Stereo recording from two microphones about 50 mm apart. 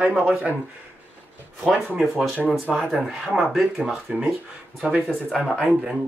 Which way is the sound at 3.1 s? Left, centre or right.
Right.